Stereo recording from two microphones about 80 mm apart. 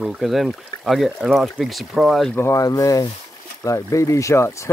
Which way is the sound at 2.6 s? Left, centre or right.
Left.